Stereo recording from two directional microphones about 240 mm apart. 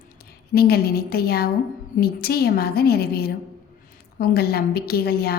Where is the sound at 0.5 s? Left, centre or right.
Left.